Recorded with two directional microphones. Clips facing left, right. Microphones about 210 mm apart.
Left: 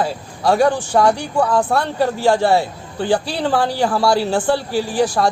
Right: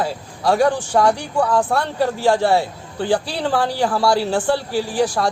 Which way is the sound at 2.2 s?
25° left (ahead or behind).